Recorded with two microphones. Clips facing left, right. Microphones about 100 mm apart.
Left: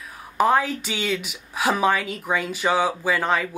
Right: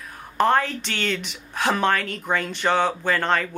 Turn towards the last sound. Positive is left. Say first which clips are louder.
# even
turn(degrees=5)  # may be behind; listen again after turning